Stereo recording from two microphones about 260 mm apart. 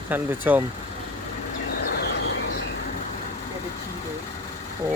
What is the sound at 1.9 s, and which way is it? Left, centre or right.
Vehicle, left.